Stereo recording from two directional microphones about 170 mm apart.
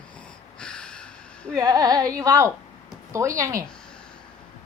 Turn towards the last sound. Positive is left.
turn(degrees=-20)  # may be behind; listen again after turning